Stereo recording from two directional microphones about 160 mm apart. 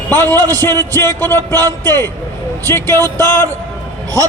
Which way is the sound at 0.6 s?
15° left (ahead or behind).